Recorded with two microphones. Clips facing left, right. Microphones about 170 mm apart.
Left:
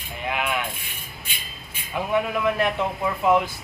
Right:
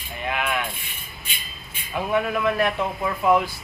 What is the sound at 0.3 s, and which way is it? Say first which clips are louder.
Rub: even; 15° left (ahead or behind).